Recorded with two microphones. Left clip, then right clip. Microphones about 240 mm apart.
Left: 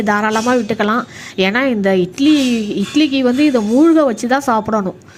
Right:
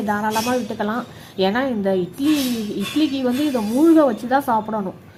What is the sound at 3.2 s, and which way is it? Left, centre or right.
Speech, left.